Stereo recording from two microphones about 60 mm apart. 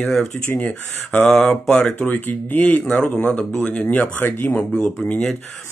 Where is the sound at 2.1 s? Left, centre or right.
Left.